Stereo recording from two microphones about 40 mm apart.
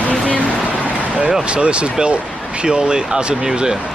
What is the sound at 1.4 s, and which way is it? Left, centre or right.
Speech, right.